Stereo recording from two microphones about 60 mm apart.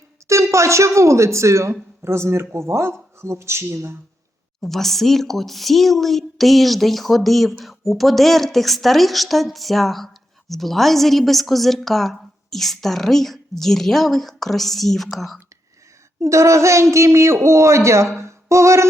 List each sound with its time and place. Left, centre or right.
0.3 s a woman's voice: right
4.6 s a woman's voice: centre
16.2 s speech: right